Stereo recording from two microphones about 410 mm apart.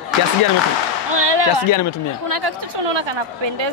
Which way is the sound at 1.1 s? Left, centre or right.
Right.